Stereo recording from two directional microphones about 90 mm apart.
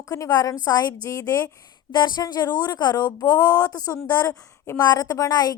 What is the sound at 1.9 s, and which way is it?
A woman's voice, 55° left (ahead or behind).